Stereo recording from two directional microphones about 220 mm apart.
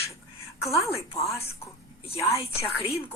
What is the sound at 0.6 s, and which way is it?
A woman's voice, 15° left (ahead or behind).